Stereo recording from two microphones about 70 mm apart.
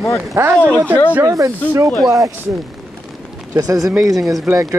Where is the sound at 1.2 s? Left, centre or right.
Right.